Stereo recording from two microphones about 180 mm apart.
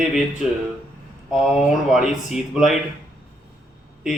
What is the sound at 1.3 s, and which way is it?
Speech, 5° right (ahead or behind).